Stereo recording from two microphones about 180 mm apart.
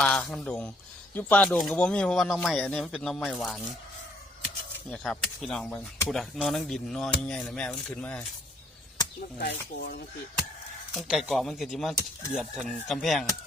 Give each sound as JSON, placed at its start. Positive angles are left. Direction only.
{"t": 0.0, "sound": "speech", "side_deg": 5}
{"t": 4.9, "sound": "speech", "side_deg": 5}
{"t": 9.4, "sound": "speech", "side_deg": 60}
{"t": 10.9, "sound": "speech", "side_deg": 0}